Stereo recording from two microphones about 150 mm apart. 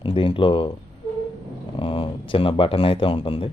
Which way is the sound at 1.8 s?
35° left (ahead or behind).